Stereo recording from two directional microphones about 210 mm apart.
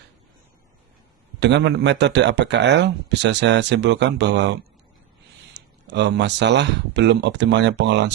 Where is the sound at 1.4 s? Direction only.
55° right (ahead or behind).